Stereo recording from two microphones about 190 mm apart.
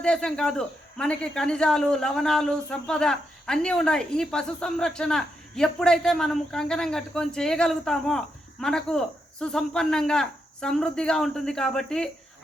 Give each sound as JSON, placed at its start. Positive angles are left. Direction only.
{"t": 0.0, "sound": "speech", "side_deg": 5}